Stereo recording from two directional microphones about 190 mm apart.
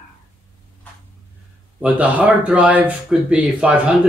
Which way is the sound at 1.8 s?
10° right (ahead or behind).